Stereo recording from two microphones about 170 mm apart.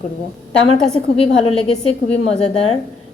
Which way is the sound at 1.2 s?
35° left (ahead or behind).